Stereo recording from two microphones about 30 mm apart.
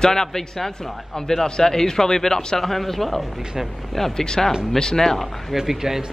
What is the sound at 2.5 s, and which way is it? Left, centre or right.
Speech, centre.